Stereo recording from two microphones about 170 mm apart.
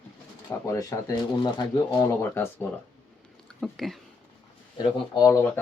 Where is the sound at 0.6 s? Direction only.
20° left (ahead or behind).